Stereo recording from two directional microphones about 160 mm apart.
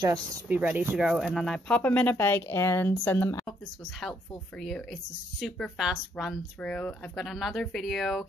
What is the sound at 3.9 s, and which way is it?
Speech, centre (ahead or behind).